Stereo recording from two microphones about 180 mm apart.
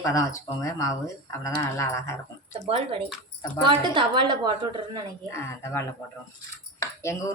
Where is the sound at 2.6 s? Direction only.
35° right (ahead or behind).